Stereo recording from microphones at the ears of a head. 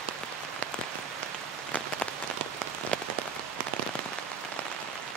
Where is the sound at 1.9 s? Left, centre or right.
Right.